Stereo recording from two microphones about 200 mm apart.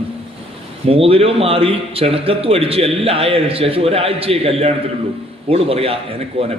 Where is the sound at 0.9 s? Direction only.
30° right (ahead or behind).